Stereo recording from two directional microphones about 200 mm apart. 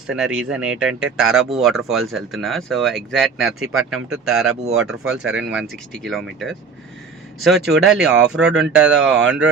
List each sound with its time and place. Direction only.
0.1 s speech: 5° right (ahead or behind)
9.0 s speech: 65° right (ahead or behind)